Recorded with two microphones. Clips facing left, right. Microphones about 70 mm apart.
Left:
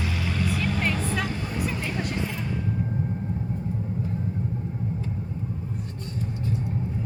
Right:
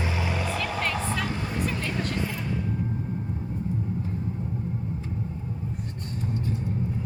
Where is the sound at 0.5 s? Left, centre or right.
Centre.